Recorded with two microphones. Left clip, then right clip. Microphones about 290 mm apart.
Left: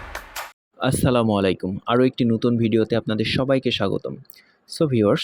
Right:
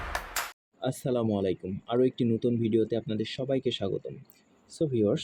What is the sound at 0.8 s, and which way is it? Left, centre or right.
Speech, left.